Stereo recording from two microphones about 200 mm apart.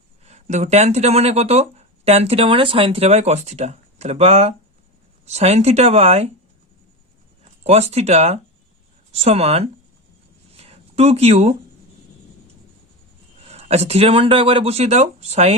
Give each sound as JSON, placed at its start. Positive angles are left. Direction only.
{"t": 0.3, "sound": "speech", "side_deg": -35}
{"t": 7.6, "sound": "speech", "side_deg": -30}
{"t": 10.6, "sound": "a sound", "side_deg": -30}
{"t": 13.5, "sound": "speech", "side_deg": -30}